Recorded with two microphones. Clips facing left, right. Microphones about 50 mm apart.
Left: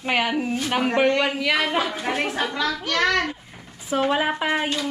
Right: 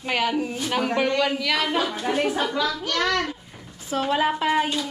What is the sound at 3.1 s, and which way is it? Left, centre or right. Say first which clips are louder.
A woman's voice: left 2 dB; centre.